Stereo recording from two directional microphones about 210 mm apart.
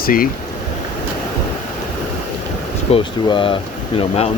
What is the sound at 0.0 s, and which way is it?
Speech, 45° left (ahead or behind).